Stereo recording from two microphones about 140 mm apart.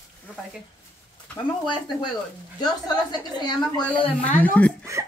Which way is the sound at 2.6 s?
30° left (ahead or behind).